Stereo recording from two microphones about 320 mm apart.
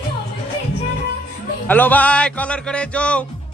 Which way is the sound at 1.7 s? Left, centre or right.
Centre.